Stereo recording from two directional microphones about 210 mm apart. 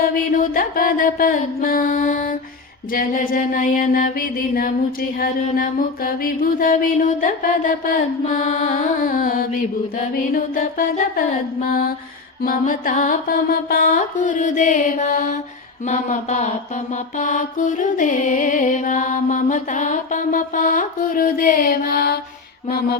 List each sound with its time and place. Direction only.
0.5 s music: 40° left (ahead or behind)
5.5 s mantra: 45° left (ahead or behind)
7.2 s music: 40° left (ahead or behind)
10.3 s mantra: 40° left (ahead or behind)
12.4 s music: 40° left (ahead or behind)